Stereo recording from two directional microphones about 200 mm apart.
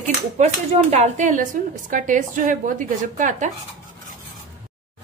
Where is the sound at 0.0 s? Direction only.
35° right (ahead or behind).